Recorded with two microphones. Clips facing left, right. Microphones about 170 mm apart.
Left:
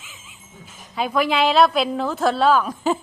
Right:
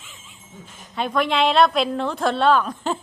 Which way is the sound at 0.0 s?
5° left (ahead or behind).